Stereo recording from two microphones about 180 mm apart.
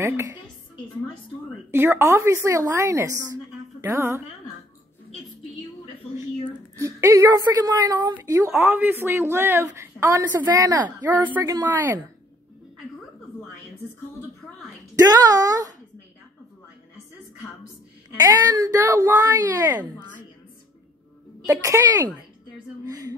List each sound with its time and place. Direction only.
0.0 s a woman's voice: 15° right (ahead or behind)
1.7 s a woman's voice: 15° right (ahead or behind)
6.8 s a woman's voice: 15° right (ahead or behind)
15.0 s a woman's voice: 20° right (ahead or behind)
18.2 s a woman's voice: 20° right (ahead or behind)
21.5 s a woman's voice: 15° right (ahead or behind)